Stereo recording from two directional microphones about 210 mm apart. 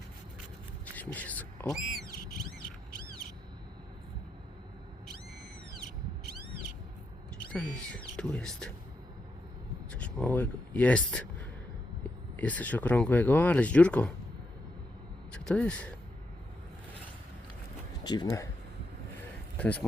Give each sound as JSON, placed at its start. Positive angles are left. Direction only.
{"t": 0.9, "sound": "speech", "side_deg": 5}
{"t": 7.5, "sound": "speech", "side_deg": 5}
{"t": 9.9, "sound": "speech", "side_deg": 5}
{"t": 12.4, "sound": "speech", "side_deg": 5}
{"t": 15.3, "sound": "speech", "side_deg": 5}
{"t": 18.0, "sound": "speech", "side_deg": 20}
{"t": 19.5, "sound": "speech", "side_deg": 5}